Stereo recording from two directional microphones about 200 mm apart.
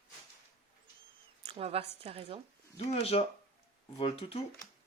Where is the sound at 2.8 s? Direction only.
30° left (ahead or behind).